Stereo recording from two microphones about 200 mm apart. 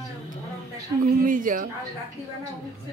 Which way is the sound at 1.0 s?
40° right (ahead or behind).